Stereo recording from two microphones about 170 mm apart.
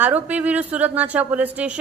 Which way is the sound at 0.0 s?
10° right (ahead or behind).